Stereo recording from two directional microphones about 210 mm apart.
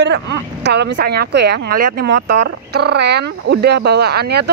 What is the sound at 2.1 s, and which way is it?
Speech, 60° right (ahead or behind).